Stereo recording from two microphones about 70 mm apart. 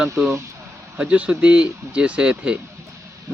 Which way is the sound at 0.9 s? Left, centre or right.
Centre.